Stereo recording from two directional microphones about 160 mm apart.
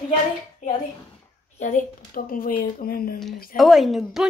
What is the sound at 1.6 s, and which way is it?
Speech, 55° left (ahead or behind).